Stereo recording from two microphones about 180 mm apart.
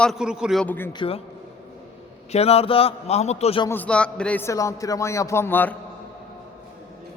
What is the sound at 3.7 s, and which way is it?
A man's voice, 10° left (ahead or behind).